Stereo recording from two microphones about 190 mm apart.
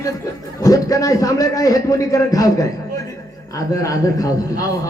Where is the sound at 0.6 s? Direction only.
20° left (ahead or behind).